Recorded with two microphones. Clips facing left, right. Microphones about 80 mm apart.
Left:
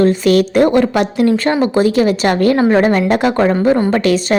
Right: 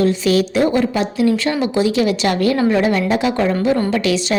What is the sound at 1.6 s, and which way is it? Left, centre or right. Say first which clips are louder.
A woman's voice: left 3 dB; left.